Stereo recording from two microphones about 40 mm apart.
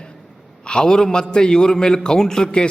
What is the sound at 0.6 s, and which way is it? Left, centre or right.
A man's voice, left.